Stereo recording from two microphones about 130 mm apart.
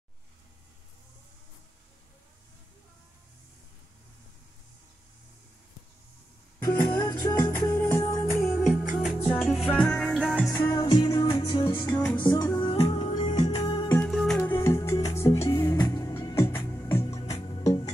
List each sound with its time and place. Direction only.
7.1 s music: 25° left (ahead or behind)
8.5 s music: centre (ahead or behind)
10.6 s music: 30° left (ahead or behind)
12.5 s music: 45° left (ahead or behind)
13.2 s music: 60° left (ahead or behind)
13.8 s music: 20° left (ahead or behind)
14.1 s music: 5° left (ahead or behind)
14.5 s music: 20° left (ahead or behind)
15.1 s music: 50° left (ahead or behind)
15.4 s music: 25° left (ahead or behind)
16.6 s music: 20° left (ahead or behind)